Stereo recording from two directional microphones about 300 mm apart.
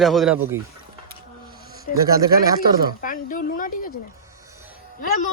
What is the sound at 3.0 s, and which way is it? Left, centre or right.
Speech, left.